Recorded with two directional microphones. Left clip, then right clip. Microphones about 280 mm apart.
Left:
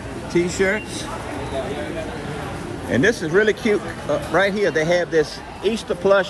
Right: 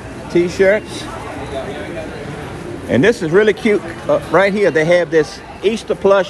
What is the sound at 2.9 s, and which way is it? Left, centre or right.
Speech, right.